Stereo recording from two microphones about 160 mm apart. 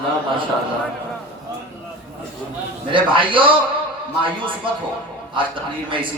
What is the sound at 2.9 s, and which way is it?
Speech, 30° right (ahead or behind).